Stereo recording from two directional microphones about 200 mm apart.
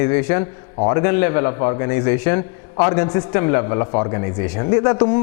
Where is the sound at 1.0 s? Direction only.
15° left (ahead or behind).